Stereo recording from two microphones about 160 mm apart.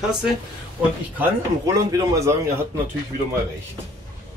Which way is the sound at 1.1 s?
20° right (ahead or behind).